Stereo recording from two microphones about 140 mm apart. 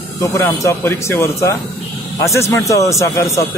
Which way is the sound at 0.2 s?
25° left (ahead or behind).